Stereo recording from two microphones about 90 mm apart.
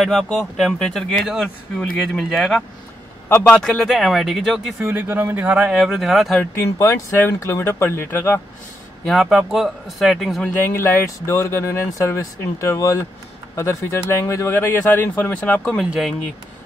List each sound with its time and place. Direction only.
0.0 s speech: 5° left (ahead or behind)
3.6 s speech: 5° left (ahead or behind)
4.9 s speech: 20° right (ahead or behind)
5.8 s speech: centre (ahead or behind)
6.5 s speech: 30° left (ahead or behind)
9.0 s speech: centre (ahead or behind)
10.6 s speech: 25° left (ahead or behind)